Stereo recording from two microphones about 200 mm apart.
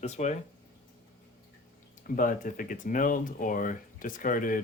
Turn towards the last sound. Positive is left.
turn(degrees=45)  # may be behind; listen again after turning